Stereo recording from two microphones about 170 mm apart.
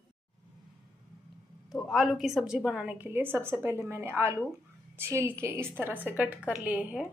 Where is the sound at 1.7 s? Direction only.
Centre (ahead or behind).